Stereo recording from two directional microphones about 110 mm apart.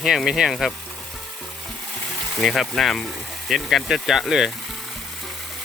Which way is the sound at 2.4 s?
5° left (ahead or behind).